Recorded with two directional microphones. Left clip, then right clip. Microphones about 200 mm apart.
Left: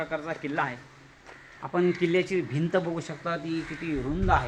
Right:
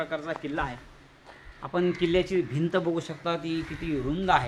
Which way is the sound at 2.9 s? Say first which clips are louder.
Right 2 dB; 15° right (ahead or behind).